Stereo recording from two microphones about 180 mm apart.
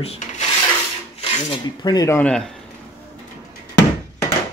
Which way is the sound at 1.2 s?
25° left (ahead or behind).